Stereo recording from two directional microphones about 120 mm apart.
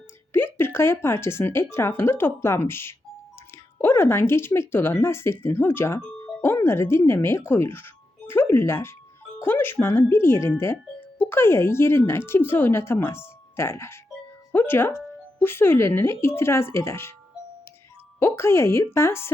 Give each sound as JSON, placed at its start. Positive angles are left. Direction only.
{"t": 0.3, "sound": "speech", "side_deg": 20}
{"t": 6.2, "sound": "music", "side_deg": 20}
{"t": 6.7, "sound": "speech", "side_deg": 20}
{"t": 18.2, "sound": "speech", "side_deg": 20}